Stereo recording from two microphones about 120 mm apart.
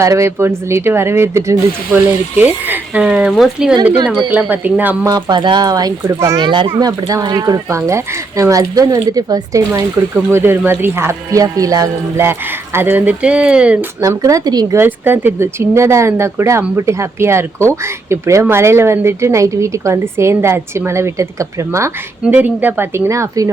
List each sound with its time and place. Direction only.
0.0 s speech: 25° right (ahead or behind); by 3.8 s 5° right (ahead or behind)
4.0 s speech: 40° right (ahead or behind)
4.3 s speech: 15° right (ahead or behind)
5.0 s speech: 35° right (ahead or behind)
6.4 s a child's voice: 45° right (ahead or behind)
6.7 s speech: 35° right (ahead or behind); by 13.7 s 10° right (ahead or behind)
14.0 s speech: 30° right (ahead or behind)
14.8 s speech: 20° right (ahead or behind)
22.2 s speech: 10° right (ahead or behind); by 23.5 s 25° right (ahead or behind)